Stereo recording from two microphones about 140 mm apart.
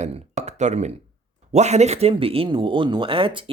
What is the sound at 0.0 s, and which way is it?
Speech, 55° right (ahead or behind).